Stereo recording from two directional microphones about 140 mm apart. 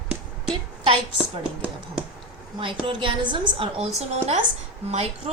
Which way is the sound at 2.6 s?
40° right (ahead or behind).